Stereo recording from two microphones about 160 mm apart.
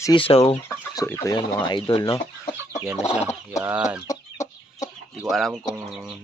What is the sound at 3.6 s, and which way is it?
Speech, 5° right (ahead or behind).